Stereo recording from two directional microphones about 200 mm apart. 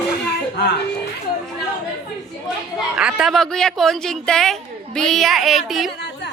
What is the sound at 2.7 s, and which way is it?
A woman's voice, 5° right (ahead or behind).